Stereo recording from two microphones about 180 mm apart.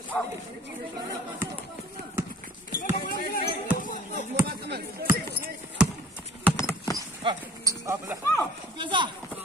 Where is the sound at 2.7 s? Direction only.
50° left (ahead or behind).